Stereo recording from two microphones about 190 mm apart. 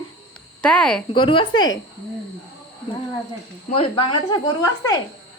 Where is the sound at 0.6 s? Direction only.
5° left (ahead or behind).